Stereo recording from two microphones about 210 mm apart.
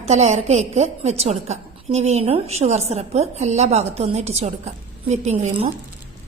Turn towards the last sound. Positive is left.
turn(degrees=-35)  # may be behind; listen again after turning